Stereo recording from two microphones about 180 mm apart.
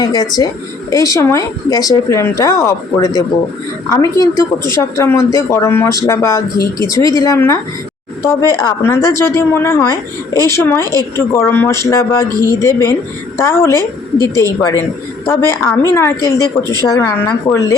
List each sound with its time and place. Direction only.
0.0 s a woman's voice: 20° left (ahead or behind)